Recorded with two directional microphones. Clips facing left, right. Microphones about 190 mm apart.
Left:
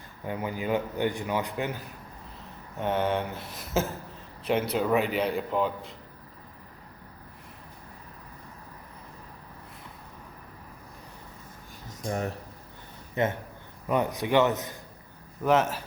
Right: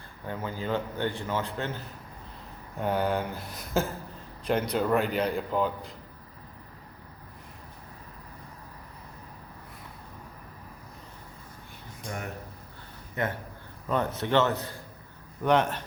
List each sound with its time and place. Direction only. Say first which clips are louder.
0.3 s a man's voice: left 2 dB; 15° left (ahead or behind)
2.7 s a man's voice: even; centre (ahead or behind)
11.9 s a sound: left 7 dB; 35° left (ahead or behind)
13.2 s a man's voice: left 4 dB; 25° left (ahead or behind)
13.8 s a man's voice: left 2 dB; 15° left (ahead or behind)
15.4 s a man's voice: even; 5° left (ahead or behind)